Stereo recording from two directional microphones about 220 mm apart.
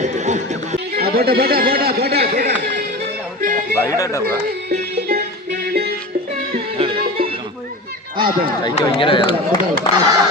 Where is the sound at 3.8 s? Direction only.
15° left (ahead or behind).